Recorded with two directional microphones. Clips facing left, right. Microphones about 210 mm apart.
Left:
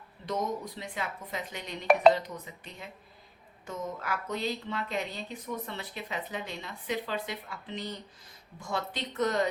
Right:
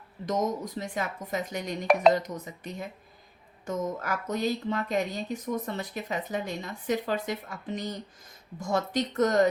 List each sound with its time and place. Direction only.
0.3 s speech: 45° right (ahead or behind)